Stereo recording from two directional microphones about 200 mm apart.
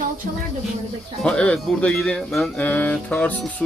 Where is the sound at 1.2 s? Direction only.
5° left (ahead or behind).